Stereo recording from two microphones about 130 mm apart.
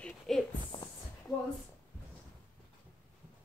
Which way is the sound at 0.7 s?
40° left (ahead or behind).